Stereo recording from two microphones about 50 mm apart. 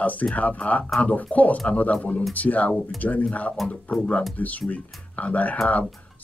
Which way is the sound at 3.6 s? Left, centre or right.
Centre.